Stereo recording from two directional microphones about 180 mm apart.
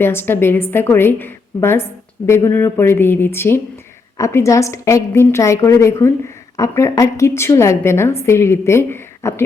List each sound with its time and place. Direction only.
0.0 s a woman's voice: 10° left (ahead or behind)